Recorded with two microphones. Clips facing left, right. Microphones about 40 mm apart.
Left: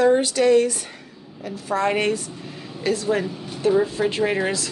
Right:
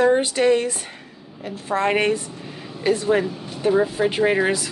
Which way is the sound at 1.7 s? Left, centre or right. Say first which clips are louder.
Right 2 dB; right.